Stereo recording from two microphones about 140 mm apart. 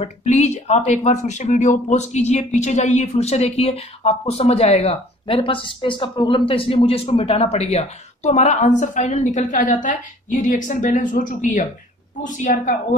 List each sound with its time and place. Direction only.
0.0 s a woman's voice: 55° left (ahead or behind)